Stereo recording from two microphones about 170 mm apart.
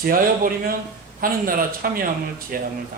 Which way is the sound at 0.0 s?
55° right (ahead or behind).